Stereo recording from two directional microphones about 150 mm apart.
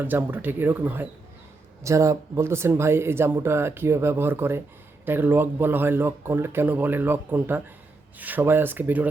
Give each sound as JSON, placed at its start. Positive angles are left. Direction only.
{"t": 0.0, "sound": "speech", "side_deg": -15}